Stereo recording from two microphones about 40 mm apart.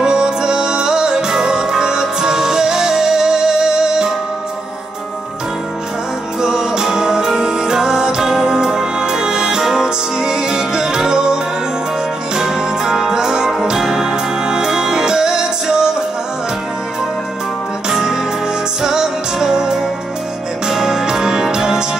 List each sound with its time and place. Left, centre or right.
0.0 s music: centre
6.4 s music: centre
12.4 s music: centre
17.8 s music: centre